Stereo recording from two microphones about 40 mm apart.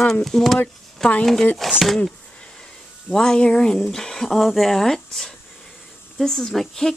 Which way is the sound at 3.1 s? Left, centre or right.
Centre.